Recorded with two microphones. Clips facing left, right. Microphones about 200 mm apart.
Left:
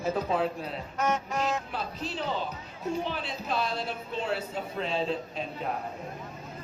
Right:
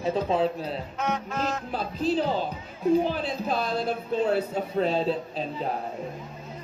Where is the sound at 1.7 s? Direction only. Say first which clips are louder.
Right 9 dB; 35° right (ahead or behind).